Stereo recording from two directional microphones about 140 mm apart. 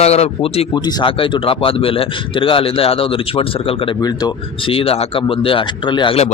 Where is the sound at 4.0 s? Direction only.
30° left (ahead or behind).